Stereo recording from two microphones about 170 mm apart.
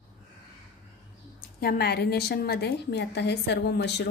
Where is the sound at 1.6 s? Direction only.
65° left (ahead or behind).